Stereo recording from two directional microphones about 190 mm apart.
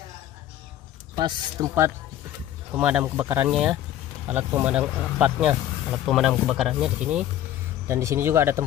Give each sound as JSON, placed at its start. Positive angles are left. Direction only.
{"t": 1.1, "sound": "speech", "side_deg": -20}
{"t": 7.9, "sound": "speech", "side_deg": -15}